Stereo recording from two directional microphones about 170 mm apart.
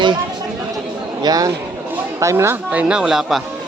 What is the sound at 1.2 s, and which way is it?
Speech, 20° right (ahead or behind).